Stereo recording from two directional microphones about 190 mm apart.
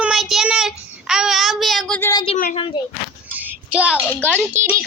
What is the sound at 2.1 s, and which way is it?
Speech, 30° left (ahead or behind).